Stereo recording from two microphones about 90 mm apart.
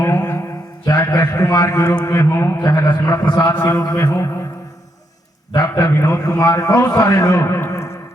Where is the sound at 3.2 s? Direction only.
45° left (ahead or behind).